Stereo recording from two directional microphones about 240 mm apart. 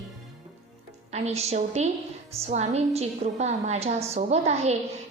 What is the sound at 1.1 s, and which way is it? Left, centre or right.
A woman's voice, right.